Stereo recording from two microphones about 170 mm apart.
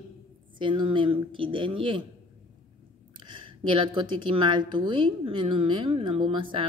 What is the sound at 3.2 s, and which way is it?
A woman's voice, 30° right (ahead or behind).